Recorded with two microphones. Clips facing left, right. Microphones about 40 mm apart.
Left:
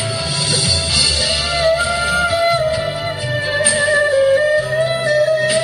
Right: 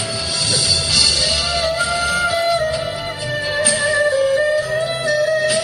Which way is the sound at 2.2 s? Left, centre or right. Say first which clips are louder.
Left 3 dB; left.